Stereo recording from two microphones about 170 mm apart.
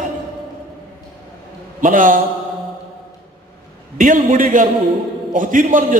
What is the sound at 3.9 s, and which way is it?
A man's voice, 50° right (ahead or behind).